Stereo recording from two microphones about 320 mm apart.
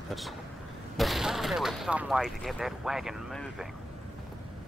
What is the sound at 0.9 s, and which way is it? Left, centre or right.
Speech, centre.